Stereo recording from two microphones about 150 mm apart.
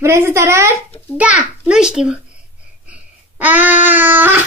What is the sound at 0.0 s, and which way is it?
A child's voice, 15° right (ahead or behind).